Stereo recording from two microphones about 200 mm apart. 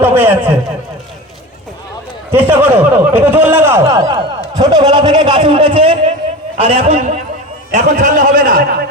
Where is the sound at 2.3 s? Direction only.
10° right (ahead or behind); by 8.6 s 40° right (ahead or behind).